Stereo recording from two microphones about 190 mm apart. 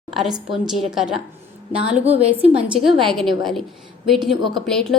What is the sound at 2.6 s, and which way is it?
A woman's voice, 5° right (ahead or behind).